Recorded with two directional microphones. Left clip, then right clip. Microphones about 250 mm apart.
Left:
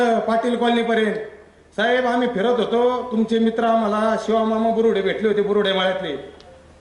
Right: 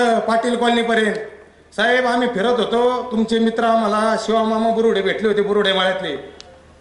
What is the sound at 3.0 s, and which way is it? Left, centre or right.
Speech, left.